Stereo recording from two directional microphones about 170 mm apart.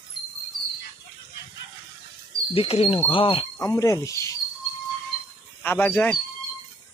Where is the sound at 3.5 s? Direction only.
20° left (ahead or behind).